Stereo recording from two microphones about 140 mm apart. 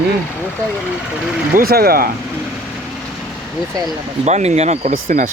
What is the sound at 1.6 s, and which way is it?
Speech, 90° right.